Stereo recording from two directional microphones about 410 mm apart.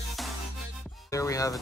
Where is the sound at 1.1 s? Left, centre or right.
Centre.